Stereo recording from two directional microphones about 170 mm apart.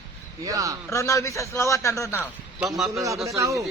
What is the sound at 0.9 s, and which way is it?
A man's voice, 15° left (ahead or behind).